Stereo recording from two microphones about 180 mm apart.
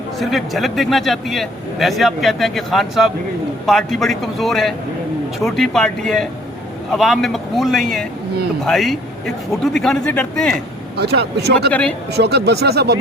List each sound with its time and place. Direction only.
0.2 s a man's voice: centre (ahead or behind)
10.9 s speech: 65° right (ahead or behind)
11.7 s speech: 5° left (ahead or behind)
12.1 s speech: 65° right (ahead or behind)